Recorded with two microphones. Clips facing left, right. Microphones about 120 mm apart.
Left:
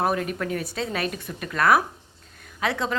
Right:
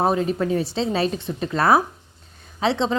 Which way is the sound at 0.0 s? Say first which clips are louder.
Right 4 dB; 25° right (ahead or behind).